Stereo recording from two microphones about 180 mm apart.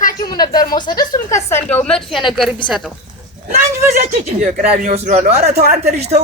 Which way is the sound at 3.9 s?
40° right (ahead or behind).